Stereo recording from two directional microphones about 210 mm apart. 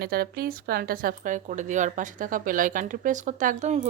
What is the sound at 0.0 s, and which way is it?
A woman's voice, 45° right (ahead or behind).